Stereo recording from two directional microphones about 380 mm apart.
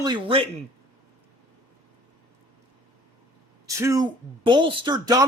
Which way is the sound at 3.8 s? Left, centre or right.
Centre.